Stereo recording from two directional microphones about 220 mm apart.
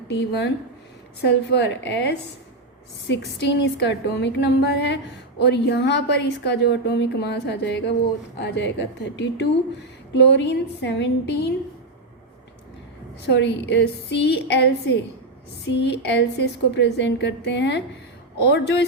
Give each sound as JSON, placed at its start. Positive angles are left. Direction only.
{"t": 0.1, "sound": "a woman's voice", "side_deg": 50}
{"t": 13.2, "sound": "a woman's voice", "side_deg": 50}